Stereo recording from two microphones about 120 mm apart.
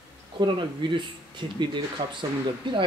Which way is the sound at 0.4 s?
40° right (ahead or behind).